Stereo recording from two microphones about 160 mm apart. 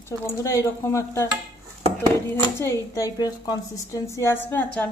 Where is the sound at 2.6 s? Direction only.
15° left (ahead or behind).